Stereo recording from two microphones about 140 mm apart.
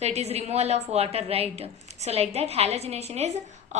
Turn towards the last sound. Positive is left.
turn(degrees=-50)  # may be behind; listen again after turning